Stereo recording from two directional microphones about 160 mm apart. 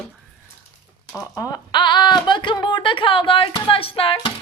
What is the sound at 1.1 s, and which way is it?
Speech, 25° left (ahead or behind).